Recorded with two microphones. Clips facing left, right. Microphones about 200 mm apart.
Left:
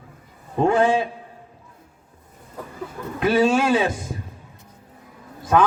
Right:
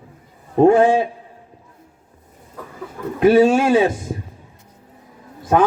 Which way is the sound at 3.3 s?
45° right (ahead or behind).